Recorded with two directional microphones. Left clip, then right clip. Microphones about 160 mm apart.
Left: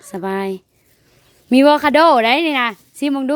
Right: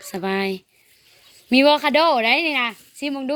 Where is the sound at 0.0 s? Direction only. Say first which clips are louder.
Left 1 dB; 35° left (ahead or behind).